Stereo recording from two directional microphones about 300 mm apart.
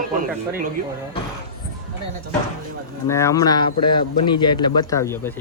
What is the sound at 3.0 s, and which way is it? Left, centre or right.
A man's voice, centre.